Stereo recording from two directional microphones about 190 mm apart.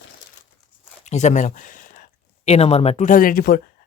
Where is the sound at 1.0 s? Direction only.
35° left (ahead or behind).